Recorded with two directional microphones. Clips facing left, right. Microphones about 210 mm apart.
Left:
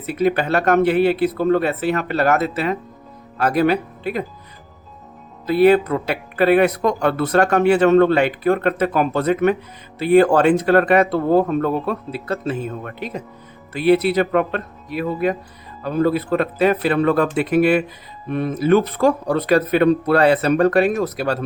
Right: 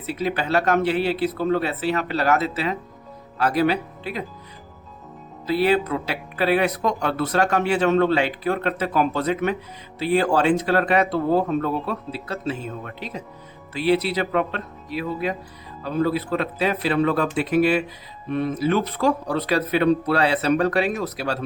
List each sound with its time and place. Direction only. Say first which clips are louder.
0.0 s speech: left 6 dB; 55° left (ahead or behind)
5.5 s speech: left 6 dB; 55° left (ahead or behind)